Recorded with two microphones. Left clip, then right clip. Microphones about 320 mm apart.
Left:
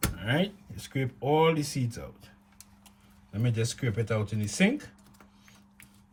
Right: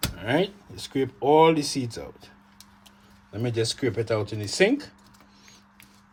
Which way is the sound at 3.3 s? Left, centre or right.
Centre.